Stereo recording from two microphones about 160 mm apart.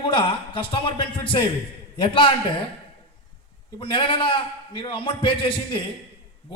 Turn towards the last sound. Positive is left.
turn(degrees=30)  # may be behind; listen again after turning